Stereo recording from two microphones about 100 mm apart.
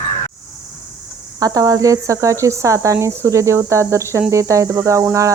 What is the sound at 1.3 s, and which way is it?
Speech, 40° right (ahead or behind).